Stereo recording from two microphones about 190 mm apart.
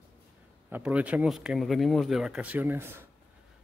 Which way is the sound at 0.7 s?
5° right (ahead or behind).